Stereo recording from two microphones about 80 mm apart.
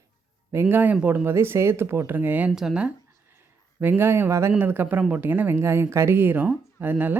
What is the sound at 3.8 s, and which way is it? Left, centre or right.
Speech, right.